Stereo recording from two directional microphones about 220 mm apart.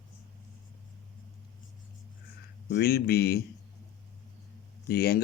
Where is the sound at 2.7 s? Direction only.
45° left (ahead or behind).